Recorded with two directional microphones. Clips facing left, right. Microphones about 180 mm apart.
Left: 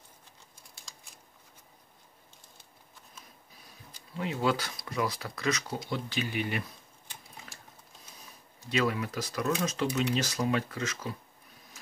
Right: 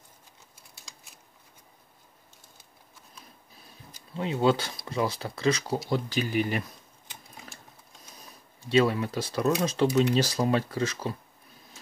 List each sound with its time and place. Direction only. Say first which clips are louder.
0.9 s a sound: right 1 dB; centre (ahead or behind)
4.2 s speech: right 5 dB; 25° right (ahead or behind)
5.9 s speech: right 4 dB; 40° right (ahead or behind)
8.5 s speech: right 6 dB; 30° right (ahead or behind)